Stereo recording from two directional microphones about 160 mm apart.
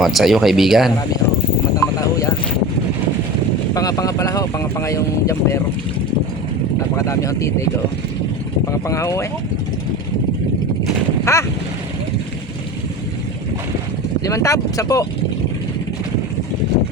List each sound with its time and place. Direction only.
0.0 s speech: centre (ahead or behind)
1.7 s a sound: 20° left (ahead or behind)
3.8 s speech: 20° left (ahead or behind)
6.9 s speech: 20° left (ahead or behind)
8.9 s speech: 20° left (ahead or behind)
11.3 s boat: 15° left (ahead or behind)
14.3 s speech: 20° left (ahead or behind)